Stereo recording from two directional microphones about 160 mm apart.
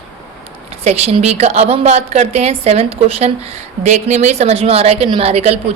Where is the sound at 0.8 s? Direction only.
40° right (ahead or behind).